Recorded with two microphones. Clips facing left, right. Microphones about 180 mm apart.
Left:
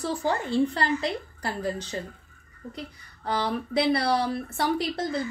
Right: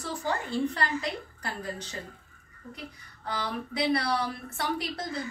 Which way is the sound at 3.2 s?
30° left (ahead or behind).